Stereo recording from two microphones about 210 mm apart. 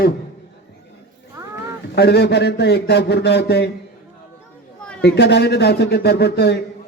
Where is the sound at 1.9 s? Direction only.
50° left (ahead or behind).